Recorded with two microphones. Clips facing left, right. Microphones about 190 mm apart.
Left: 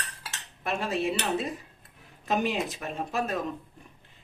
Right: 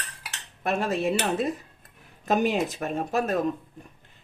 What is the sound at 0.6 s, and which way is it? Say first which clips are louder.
A woman's voice: right 3 dB; 45° right (ahead or behind).